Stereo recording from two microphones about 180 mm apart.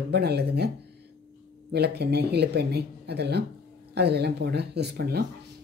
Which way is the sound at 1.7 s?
65° right (ahead or behind).